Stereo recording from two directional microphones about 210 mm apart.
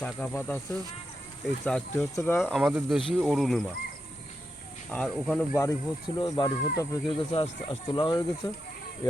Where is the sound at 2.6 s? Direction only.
5° right (ahead or behind).